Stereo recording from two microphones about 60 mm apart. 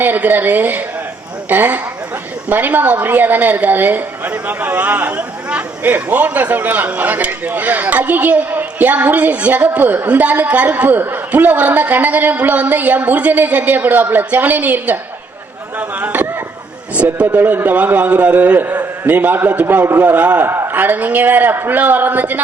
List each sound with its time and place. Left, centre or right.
0.0 s a man's voice: right